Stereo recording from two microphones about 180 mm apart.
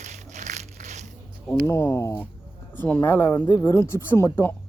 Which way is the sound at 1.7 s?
15° left (ahead or behind).